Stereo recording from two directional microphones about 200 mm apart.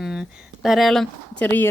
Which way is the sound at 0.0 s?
Centre (ahead or behind).